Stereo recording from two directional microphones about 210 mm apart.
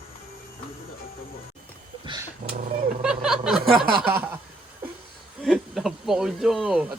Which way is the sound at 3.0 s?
5° right (ahead or behind).